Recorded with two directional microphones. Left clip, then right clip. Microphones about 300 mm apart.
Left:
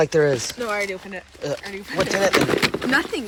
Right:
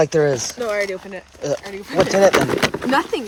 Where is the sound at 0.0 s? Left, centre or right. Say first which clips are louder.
Right 2 dB; centre.